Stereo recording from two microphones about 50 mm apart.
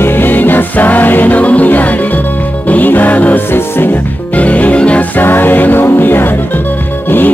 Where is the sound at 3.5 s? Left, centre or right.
Left.